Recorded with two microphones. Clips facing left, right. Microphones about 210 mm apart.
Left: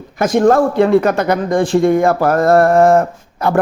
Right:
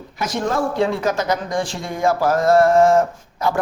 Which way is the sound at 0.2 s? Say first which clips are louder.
Left 10 dB; 50° left (ahead or behind).